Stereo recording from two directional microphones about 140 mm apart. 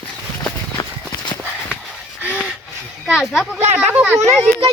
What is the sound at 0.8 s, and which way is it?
Clip-clop, 25° left (ahead or behind).